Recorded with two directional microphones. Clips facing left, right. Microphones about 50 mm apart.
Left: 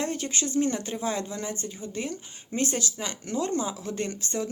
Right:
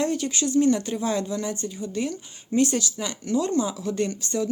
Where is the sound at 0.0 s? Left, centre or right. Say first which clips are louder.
Right 5 dB; left.